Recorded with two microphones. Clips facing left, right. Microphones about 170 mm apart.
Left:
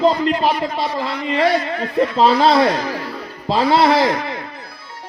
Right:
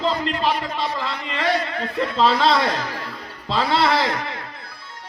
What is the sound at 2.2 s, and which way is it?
Speech, 45° left (ahead or behind).